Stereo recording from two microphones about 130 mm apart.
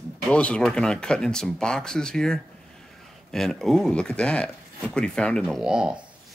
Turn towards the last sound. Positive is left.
turn(degrees=-5)  # may be behind; listen again after turning